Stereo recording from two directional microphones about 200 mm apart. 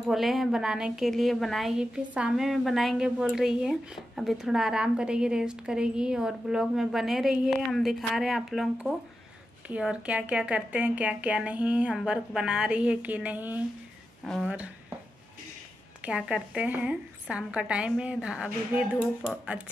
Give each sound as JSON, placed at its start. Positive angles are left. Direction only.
{"t": 0.1, "sound": "a woman's voice", "side_deg": 0}
{"t": 16.0, "sound": "a woman's voice", "side_deg": -5}